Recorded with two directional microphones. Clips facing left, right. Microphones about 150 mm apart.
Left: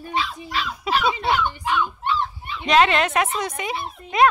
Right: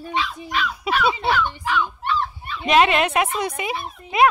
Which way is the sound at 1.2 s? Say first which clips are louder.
Even; 20° left (ahead or behind).